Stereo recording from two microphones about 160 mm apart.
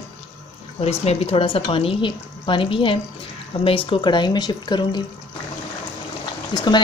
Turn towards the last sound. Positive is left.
turn(degrees=30)  # may be behind; listen again after turning